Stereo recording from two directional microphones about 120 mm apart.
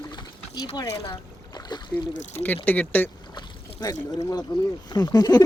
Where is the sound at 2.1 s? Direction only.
90° left.